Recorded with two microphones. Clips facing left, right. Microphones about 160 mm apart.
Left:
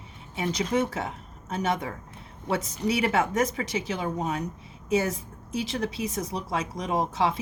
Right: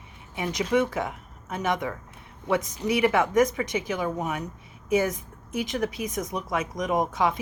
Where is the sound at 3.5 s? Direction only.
30° left (ahead or behind).